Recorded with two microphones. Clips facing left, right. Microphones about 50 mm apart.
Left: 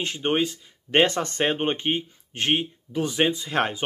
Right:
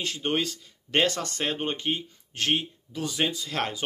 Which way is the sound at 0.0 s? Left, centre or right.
Left.